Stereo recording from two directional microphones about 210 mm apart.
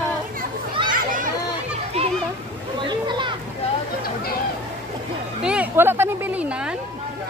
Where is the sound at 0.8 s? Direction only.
40° right (ahead or behind).